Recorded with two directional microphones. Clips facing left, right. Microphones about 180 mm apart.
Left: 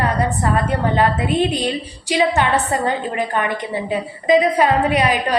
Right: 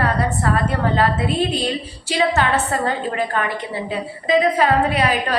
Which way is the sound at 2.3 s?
15° left (ahead or behind).